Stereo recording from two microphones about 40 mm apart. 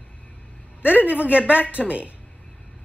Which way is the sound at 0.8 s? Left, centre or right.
Right.